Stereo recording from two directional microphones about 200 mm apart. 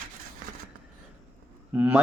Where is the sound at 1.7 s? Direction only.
10° right (ahead or behind).